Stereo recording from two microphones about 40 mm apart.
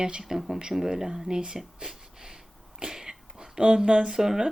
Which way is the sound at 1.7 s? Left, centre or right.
Centre.